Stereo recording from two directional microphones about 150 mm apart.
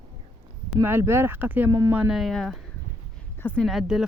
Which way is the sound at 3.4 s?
10° left (ahead or behind).